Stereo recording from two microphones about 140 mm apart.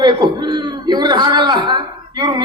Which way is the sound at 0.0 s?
30° right (ahead or behind).